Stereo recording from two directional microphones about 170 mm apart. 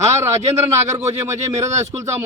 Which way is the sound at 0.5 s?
15° right (ahead or behind).